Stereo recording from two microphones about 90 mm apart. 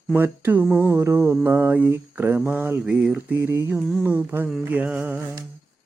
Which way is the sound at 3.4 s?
30° right (ahead or behind).